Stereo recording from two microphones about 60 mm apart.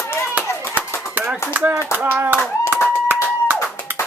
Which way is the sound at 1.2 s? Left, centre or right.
Right.